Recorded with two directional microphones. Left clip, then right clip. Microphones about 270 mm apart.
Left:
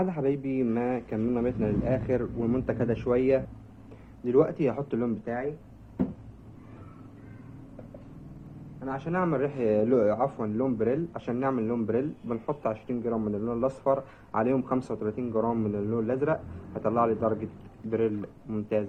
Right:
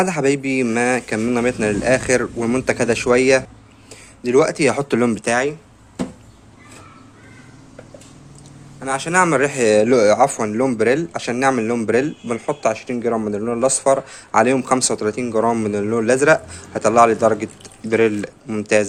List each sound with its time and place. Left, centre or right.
0.0 s speech: right
5.2 s speech: right
9.0 s speech: right